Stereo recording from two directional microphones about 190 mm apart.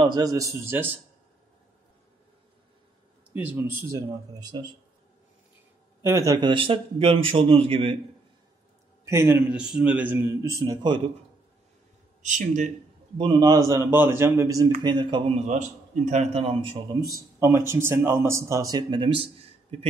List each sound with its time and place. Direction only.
0.0 s speech: 20° right (ahead or behind)
3.3 s speech: 10° right (ahead or behind)
4.4 s a man's voice: 20° right (ahead or behind)
6.0 s a man's voice: 15° right (ahead or behind)
9.0 s speech: 15° right (ahead or behind)
12.2 s speech: 40° right (ahead or behind)
13.2 s a man's voice: 25° right (ahead or behind)
17.4 s speech: 15° right (ahead or behind); by 19.9 s 30° right (ahead or behind)